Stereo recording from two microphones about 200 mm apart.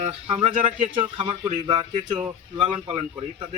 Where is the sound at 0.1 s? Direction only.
30° right (ahead or behind).